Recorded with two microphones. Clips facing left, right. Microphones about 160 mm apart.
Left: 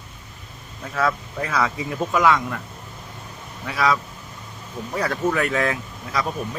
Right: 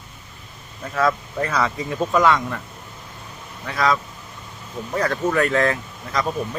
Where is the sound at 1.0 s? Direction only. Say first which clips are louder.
Right 3 dB; centre (ahead or behind).